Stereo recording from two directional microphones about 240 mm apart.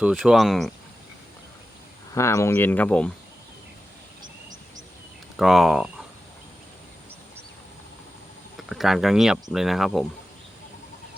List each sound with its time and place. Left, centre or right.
0.0 s speech: centre
2.1 s speech: centre
5.4 s speech: centre
8.5 s speech: centre